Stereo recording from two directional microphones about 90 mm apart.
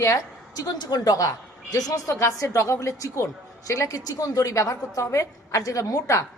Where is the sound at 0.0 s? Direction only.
40° left (ahead or behind).